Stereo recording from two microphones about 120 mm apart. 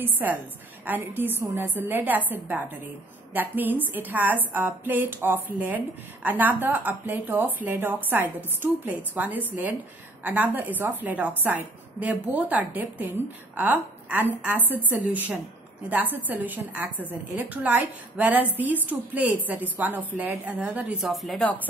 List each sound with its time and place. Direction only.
0.0 s a woman's voice: 15° right (ahead or behind)
21.0 s a woman's voice: centre (ahead or behind)